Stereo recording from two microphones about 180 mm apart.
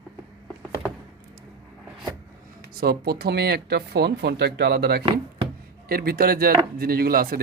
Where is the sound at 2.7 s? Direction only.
60° right (ahead or behind).